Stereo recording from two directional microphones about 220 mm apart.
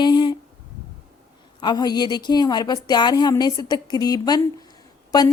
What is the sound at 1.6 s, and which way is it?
A woman's voice, 20° left (ahead or behind).